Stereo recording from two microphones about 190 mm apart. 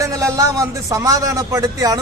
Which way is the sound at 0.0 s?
15° right (ahead or behind).